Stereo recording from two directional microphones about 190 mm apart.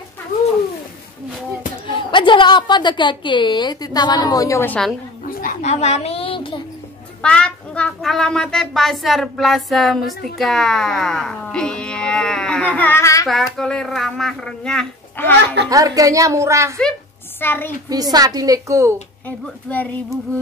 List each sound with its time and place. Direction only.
1.9 s a woman's voice: 25° left (ahead or behind); by 4.9 s 5° left (ahead or behind)
5.4 s music: 40° left (ahead or behind); by 6.6 s 25° left (ahead or behind)
7.2 s speech: 5° left (ahead or behind)
13.3 s speech: centre (ahead or behind)
15.7 s a woman's voice: 20° right (ahead or behind)
17.4 s a woman's voice: 10° left (ahead or behind)
17.8 s a woman's voice: 20° right (ahead or behind)
19.2 s a woman's voice: 10° left (ahead or behind)